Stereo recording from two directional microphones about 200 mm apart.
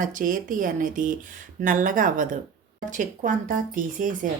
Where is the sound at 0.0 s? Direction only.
40° right (ahead or behind).